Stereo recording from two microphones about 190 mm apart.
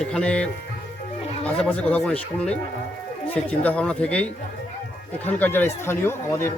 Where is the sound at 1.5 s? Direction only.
5° left (ahead or behind).